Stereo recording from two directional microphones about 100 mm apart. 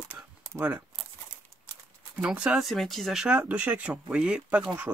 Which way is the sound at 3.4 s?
15° right (ahead or behind).